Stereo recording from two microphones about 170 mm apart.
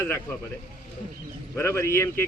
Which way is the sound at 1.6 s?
15° left (ahead or behind).